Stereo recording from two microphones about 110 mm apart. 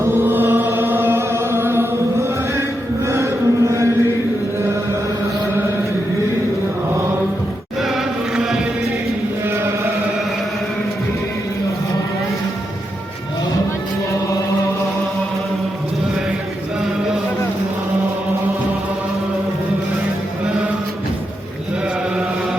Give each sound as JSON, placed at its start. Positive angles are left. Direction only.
{"t": 0.0, "sound": "music", "side_deg": -20}
{"t": 3.1, "sound": "a sound", "side_deg": -25}
{"t": 7.8, "sound": "insect", "side_deg": -5}